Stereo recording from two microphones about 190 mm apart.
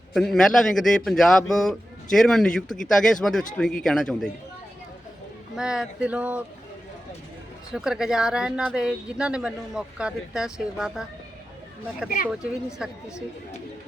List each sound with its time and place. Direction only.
0.1 s speech: centre (ahead or behind)
5.5 s speech: 5° right (ahead or behind)
7.7 s speech: 5° right (ahead or behind)
12.0 s speech: 50° left (ahead or behind)
12.3 s speech: 5° right (ahead or behind)